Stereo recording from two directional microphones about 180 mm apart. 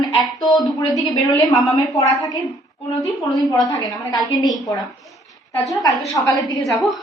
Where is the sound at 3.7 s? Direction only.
20° left (ahead or behind).